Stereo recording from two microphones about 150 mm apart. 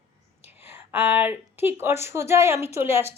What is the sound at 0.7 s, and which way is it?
A woman's voice, 10° right (ahead or behind).